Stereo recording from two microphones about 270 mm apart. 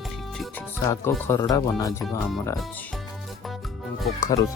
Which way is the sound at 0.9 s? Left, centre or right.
Centre.